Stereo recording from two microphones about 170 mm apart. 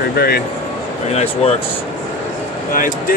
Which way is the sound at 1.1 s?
40° left (ahead or behind).